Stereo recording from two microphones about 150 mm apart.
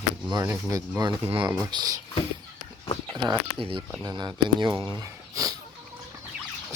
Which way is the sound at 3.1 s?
25° right (ahead or behind).